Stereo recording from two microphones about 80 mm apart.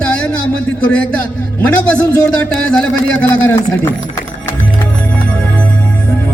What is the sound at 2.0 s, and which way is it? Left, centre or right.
Speech, centre.